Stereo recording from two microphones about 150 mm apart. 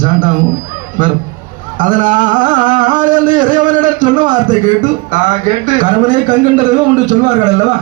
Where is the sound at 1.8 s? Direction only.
60° right (ahead or behind).